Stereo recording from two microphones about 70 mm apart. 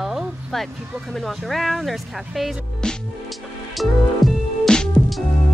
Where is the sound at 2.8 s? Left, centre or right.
Centre.